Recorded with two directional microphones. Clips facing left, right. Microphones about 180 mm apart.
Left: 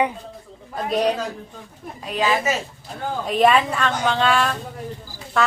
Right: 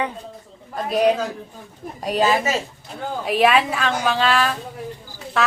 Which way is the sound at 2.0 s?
40° right (ahead or behind).